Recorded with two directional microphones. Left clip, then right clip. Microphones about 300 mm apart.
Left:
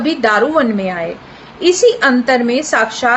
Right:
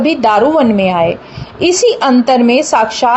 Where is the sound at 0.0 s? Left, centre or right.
Centre.